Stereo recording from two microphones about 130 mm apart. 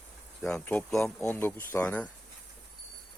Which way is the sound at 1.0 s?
15° left (ahead or behind).